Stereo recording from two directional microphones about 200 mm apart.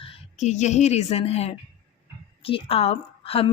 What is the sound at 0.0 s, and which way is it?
Speech, 30° left (ahead or behind).